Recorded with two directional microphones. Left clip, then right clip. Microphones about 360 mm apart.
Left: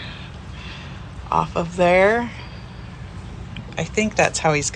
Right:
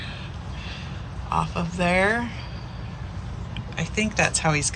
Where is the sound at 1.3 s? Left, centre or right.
Centre.